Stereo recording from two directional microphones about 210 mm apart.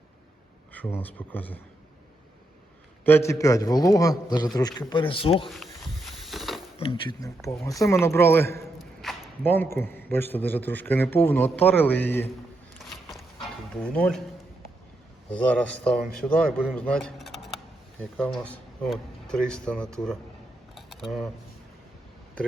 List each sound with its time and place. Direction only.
0.7 s a man's voice: 10° left (ahead or behind)
3.0 s a man's voice: 10° left (ahead or behind)
5.5 s a sound: centre (ahead or behind)
6.7 s a man's voice: 25° left (ahead or behind)
8.8 s a man's voice: centre (ahead or behind)
12.8 s a sound: centre (ahead or behind)
13.8 s a man's voice: 5° left (ahead or behind)
15.3 s a man's voice: 5° left (ahead or behind)
20.7 s camera: centre (ahead or behind)